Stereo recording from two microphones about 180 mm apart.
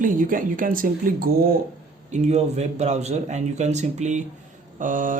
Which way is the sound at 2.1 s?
40° right (ahead or behind).